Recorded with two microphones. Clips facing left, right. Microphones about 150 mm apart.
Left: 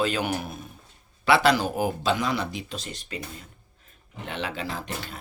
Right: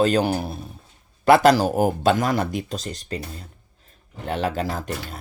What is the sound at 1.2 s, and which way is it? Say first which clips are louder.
Speech: right 6 dB; 45° right (ahead or behind).